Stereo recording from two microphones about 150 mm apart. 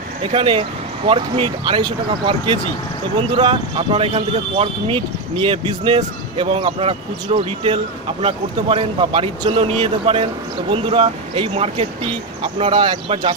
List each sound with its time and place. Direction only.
0.2 s speech: 40° right (ahead or behind)